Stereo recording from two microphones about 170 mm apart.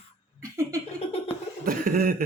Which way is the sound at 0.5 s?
15° right (ahead or behind).